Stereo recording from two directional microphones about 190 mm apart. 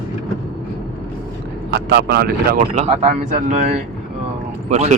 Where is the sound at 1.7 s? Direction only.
60° right (ahead or behind).